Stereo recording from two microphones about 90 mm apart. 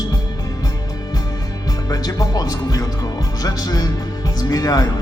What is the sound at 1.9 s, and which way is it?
Speech, 45° left (ahead or behind).